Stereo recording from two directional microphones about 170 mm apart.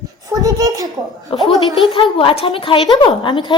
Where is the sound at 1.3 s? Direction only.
30° left (ahead or behind).